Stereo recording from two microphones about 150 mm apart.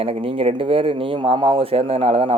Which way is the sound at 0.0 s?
40° right (ahead or behind).